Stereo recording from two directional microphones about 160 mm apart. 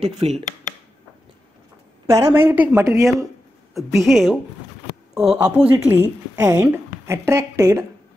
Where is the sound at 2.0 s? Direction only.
15° right (ahead or behind).